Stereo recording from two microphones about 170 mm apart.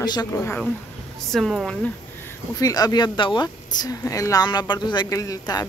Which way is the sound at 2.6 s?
20° left (ahead or behind).